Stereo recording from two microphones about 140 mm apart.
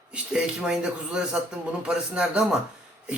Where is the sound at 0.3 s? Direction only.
5° right (ahead or behind).